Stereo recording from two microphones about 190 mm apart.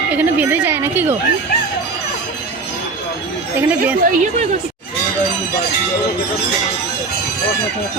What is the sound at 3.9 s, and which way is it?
Speech, 40° right (ahead or behind).